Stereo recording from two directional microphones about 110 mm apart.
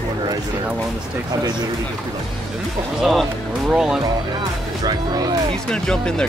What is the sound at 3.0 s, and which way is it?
Speech, centre (ahead or behind).